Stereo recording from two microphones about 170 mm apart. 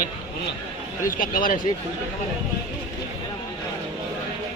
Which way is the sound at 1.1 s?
55° left (ahead or behind).